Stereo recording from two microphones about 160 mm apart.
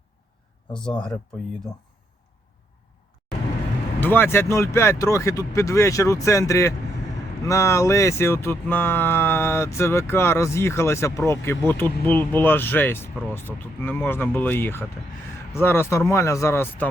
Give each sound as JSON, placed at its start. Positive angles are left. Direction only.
{"t": 0.9, "sound": "speech", "side_deg": 5}
{"t": 4.0, "sound": "speech", "side_deg": 15}